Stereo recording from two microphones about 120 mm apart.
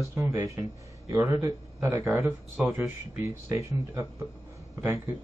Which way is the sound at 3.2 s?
25° right (ahead or behind).